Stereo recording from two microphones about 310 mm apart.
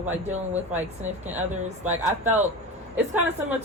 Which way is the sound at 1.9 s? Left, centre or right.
Centre.